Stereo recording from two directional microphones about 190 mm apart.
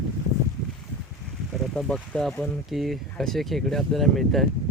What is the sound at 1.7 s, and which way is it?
Speech, 5° left (ahead or behind).